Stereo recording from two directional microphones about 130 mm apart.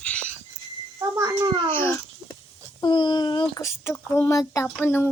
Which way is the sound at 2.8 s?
35° left (ahead or behind).